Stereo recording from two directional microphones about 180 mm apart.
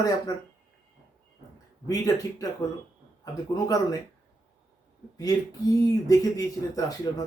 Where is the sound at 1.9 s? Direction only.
20° left (ahead or behind).